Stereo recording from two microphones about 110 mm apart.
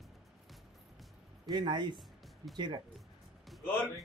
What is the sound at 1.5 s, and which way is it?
Speech, 45° right (ahead or behind).